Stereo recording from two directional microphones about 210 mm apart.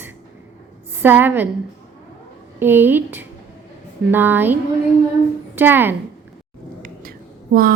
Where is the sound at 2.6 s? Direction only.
10° right (ahead or behind).